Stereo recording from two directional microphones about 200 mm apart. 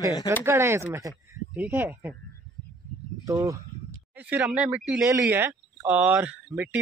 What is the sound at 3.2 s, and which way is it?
Speech, 15° right (ahead or behind).